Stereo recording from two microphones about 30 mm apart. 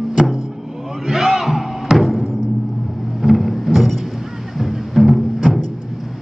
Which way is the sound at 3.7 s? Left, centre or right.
Centre.